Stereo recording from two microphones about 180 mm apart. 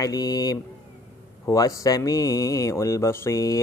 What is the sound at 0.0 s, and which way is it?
Speech, 20° left (ahead or behind).